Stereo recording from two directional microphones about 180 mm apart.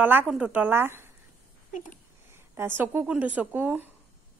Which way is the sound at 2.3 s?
10° right (ahead or behind).